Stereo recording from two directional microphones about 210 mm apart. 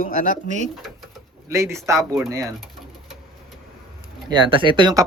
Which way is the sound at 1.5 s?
15° right (ahead or behind).